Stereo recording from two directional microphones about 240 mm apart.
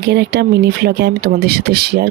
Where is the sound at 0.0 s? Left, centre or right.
Right.